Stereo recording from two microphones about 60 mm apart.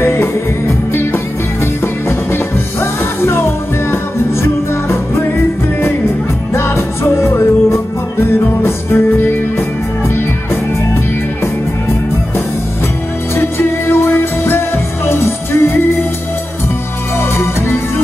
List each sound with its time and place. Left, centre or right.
0.0 s music: left
6.5 s music: left
13.4 s music: left
17.2 s music: left